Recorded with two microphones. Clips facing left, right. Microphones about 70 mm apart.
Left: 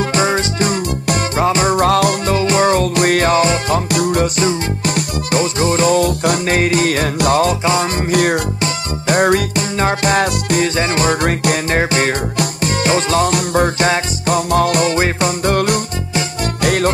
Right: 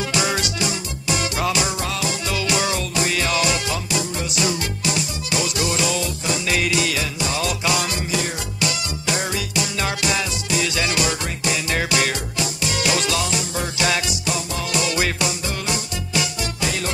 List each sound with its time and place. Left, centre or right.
0.0 s music: left
0.7 s music: left
2.3 s music: left
4.8 s music: left
7.4 s music: left
8.1 s music: left
8.5 s music: left
10.8 s music: left
11.2 s music: left
11.7 s music: left
13.3 s music: left
13.8 s music: left
14.3 s music: left
15.4 s music: left